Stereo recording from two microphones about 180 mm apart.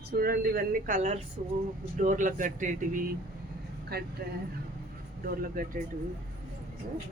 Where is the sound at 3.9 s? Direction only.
65° right (ahead or behind).